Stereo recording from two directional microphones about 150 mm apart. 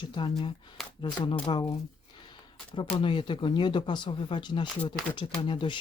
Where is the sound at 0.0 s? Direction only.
30° left (ahead or behind).